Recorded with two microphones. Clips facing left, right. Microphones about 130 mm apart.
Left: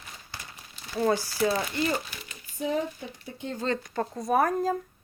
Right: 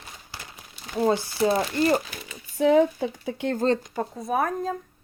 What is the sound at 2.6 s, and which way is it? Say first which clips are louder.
Speech: right 10 dB; 90° right.